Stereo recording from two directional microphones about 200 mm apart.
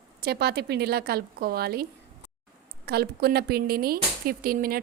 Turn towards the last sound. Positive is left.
turn(degrees=-45)  # may be behind; listen again after turning